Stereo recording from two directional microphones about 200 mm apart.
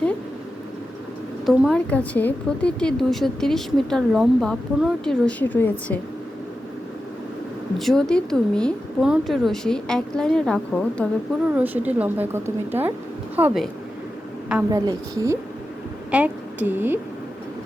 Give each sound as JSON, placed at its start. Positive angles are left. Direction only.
{"t": 1.5, "sound": "a woman's voice", "side_deg": 0}
{"t": 7.8, "sound": "a woman's voice", "side_deg": 0}
{"t": 11.5, "sound": "a woman's voice", "side_deg": -10}
{"t": 14.7, "sound": "a woman's voice", "side_deg": -15}